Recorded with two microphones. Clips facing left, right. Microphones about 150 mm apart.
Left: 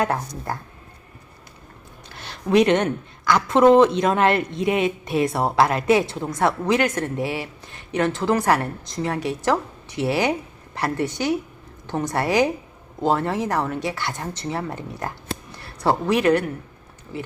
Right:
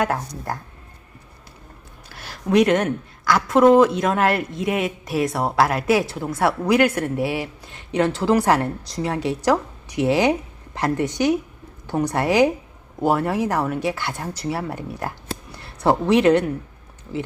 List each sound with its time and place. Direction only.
0.0 s a woman's voice: centre (ahead or behind)
2.0 s a woman's voice: 5° right (ahead or behind)